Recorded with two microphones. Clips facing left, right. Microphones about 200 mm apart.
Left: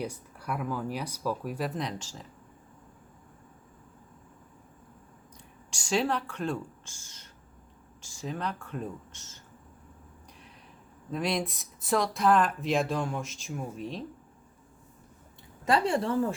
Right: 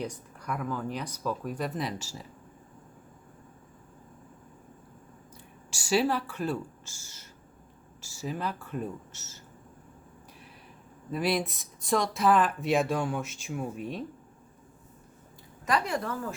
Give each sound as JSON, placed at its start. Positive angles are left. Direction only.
{"t": 0.0, "sound": "speech", "side_deg": 10}
{"t": 5.7, "sound": "speech", "side_deg": -5}
{"t": 11.1, "sound": "speech", "side_deg": -5}
{"t": 15.6, "sound": "a woman's voice", "side_deg": 30}